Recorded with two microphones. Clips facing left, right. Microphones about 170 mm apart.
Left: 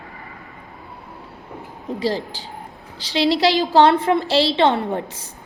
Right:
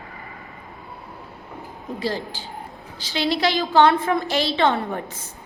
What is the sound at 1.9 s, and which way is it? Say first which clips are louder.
A woman's voice: left 4 dB; 30° left (ahead or behind).